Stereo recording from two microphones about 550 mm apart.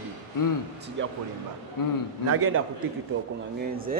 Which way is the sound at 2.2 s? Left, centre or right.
Right.